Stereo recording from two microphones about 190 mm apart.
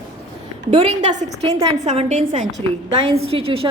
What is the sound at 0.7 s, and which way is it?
Speech, 35° right (ahead or behind).